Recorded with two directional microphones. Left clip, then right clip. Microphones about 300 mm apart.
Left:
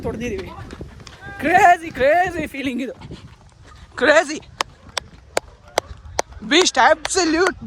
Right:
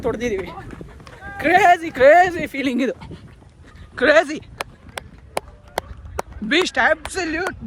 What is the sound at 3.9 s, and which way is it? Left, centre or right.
Speech, centre.